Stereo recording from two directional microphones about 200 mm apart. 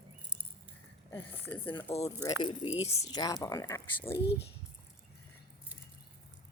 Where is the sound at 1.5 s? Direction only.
25° left (ahead or behind).